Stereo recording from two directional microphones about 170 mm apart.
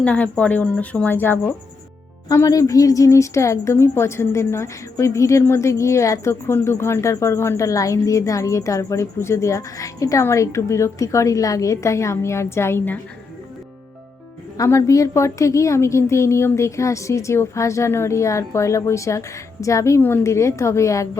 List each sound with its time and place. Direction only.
0.0 s a woman's voice: 10° left (ahead or behind)
14.6 s a woman's voice: 15° left (ahead or behind)